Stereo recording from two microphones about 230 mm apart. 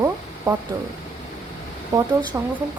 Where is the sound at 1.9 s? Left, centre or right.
Centre.